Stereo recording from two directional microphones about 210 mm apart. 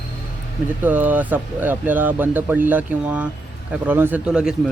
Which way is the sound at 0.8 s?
10° right (ahead or behind).